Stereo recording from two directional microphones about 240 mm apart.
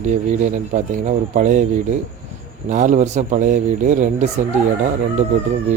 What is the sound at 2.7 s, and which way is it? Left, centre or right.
Speech, right.